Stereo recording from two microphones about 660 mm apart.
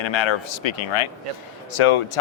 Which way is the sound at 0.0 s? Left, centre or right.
Left.